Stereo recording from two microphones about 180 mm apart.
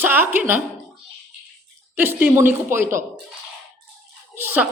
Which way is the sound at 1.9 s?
10° right (ahead or behind).